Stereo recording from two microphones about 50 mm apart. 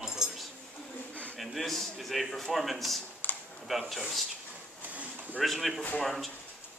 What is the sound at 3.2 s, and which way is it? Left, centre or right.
Computer keyboard, left.